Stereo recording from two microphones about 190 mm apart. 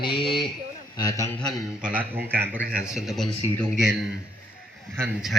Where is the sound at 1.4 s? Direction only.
5° left (ahead or behind).